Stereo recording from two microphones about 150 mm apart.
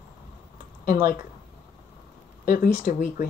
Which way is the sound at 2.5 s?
75° left (ahead or behind).